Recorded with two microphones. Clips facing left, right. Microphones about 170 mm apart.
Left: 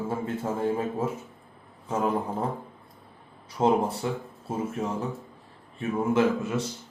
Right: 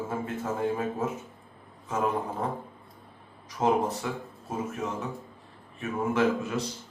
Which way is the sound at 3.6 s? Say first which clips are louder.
Left 2 dB; 30° left (ahead or behind).